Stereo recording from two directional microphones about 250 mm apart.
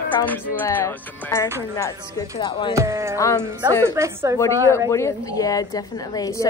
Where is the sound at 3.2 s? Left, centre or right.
Centre.